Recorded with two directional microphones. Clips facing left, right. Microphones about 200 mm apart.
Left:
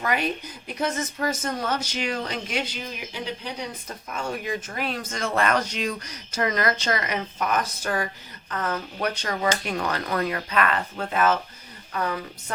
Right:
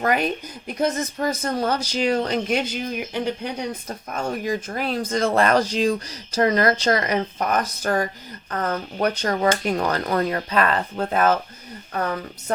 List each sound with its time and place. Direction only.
0.0 s speech: 45° right (ahead or behind)
4.1 s speech: 40° right (ahead or behind)